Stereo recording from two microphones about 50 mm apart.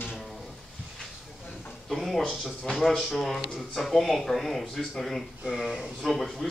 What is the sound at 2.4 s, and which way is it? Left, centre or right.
Speech, centre.